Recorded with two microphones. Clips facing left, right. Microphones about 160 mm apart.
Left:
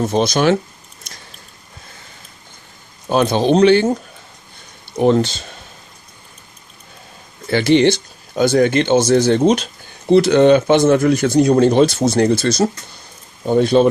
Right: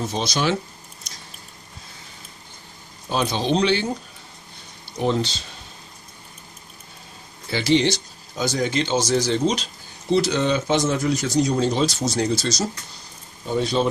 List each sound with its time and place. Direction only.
0.0 s speech: 50° left (ahead or behind)
1.1 s biting: 55° left (ahead or behind)
3.1 s speech: 55° left (ahead or behind)
7.4 s speech: 55° left (ahead or behind)